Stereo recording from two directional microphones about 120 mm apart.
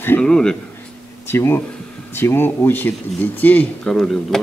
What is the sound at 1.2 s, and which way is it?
Speech, 20° left (ahead or behind).